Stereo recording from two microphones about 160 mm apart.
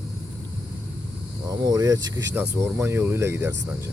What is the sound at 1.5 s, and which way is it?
Speech, 25° right (ahead or behind).